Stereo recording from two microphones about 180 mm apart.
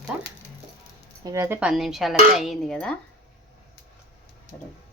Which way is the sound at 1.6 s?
Centre (ahead or behind).